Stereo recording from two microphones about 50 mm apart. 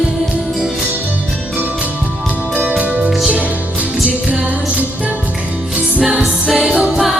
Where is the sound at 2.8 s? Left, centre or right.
Right.